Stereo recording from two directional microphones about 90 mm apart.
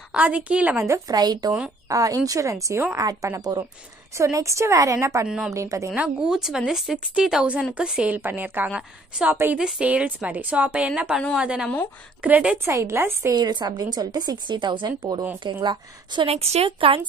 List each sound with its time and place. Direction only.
0.1 s a woman's voice: 15° right (ahead or behind)
0.7 s speech: 35° right (ahead or behind)
1.1 s speech: 50° right (ahead or behind); by 3.0 s 30° right (ahead or behind)
3.0 s speech: 40° right (ahead or behind)
4.1 s speech: 35° right (ahead or behind)
5.2 s a woman's voice: 10° right (ahead or behind)
5.5 s speech: 35° right (ahead or behind)
5.9 s a woman's voice: 10° right (ahead or behind)
8.2 s a woman's voice: 20° right (ahead or behind)
9.3 s a woman's voice: 25° right (ahead or behind)
9.6 s a woman's voice: 10° right (ahead or behind)
12.6 s a woman's voice: 30° right (ahead or behind)
13.3 s a woman's voice: 55° right (ahead or behind); by 17.0 s 90° right